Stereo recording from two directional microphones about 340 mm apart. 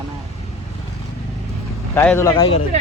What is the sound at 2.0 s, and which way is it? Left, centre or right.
Speech, centre.